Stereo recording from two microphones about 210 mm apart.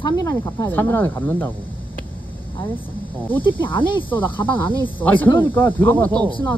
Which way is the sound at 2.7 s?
10° left (ahead or behind).